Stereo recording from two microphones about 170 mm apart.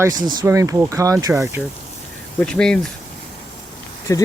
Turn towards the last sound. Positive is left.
turn(degrees=20)  # may be behind; listen again after turning